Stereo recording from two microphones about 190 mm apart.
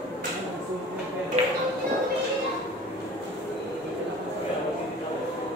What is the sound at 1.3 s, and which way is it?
Music, 35° right (ahead or behind).